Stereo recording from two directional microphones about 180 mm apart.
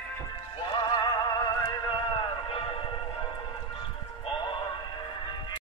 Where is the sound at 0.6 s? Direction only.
25° left (ahead or behind).